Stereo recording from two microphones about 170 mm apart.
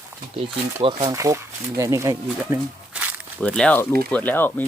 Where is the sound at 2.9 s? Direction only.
5° right (ahead or behind).